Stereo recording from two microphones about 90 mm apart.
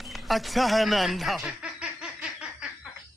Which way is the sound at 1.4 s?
10° right (ahead or behind).